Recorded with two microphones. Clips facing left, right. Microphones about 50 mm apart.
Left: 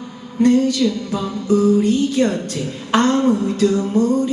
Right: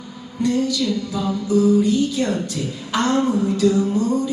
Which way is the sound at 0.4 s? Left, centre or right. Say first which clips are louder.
Left 5 dB; left.